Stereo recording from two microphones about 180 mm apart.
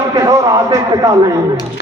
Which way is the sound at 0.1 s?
20° right (ahead or behind).